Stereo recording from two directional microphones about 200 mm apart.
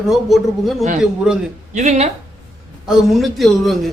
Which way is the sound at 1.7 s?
35° right (ahead or behind).